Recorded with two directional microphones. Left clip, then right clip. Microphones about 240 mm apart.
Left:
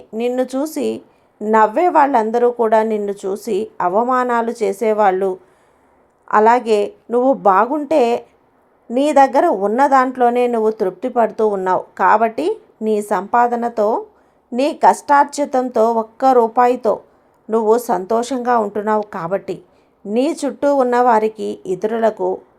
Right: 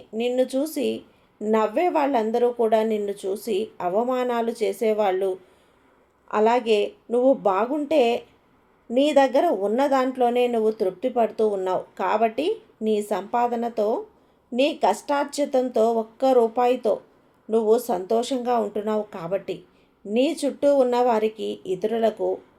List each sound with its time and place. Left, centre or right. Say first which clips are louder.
0.1 s speech: left 4 dB; left